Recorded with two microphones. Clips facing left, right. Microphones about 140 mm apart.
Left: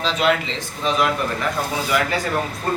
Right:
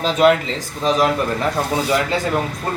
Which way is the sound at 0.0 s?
45° right (ahead or behind).